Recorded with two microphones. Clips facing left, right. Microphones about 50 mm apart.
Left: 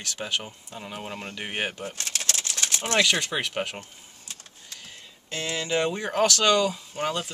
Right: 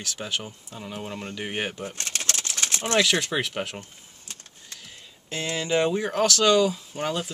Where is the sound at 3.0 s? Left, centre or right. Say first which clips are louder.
Right 1 dB; centre.